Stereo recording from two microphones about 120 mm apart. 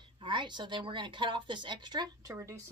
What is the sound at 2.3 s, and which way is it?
Speech, 25° right (ahead or behind).